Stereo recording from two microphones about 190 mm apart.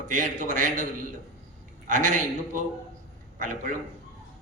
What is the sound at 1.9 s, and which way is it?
A man's voice, 40° right (ahead or behind).